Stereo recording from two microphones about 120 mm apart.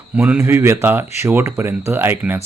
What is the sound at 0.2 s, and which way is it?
Speech, 20° right (ahead or behind).